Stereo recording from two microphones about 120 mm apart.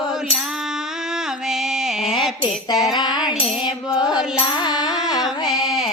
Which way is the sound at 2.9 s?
35° left (ahead or behind).